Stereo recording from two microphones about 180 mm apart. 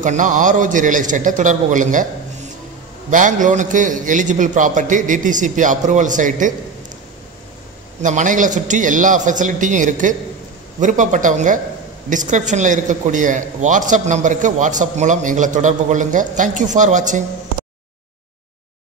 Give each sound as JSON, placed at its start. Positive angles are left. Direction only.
{"t": 0.0, "sound": "a man's voice", "side_deg": -45}
{"t": 3.1, "sound": "a man's voice", "side_deg": -45}
{"t": 8.0, "sound": "a man's voice", "side_deg": -45}